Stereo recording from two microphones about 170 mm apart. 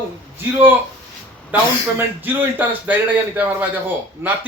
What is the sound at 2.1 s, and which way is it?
A man's voice, 10° right (ahead or behind).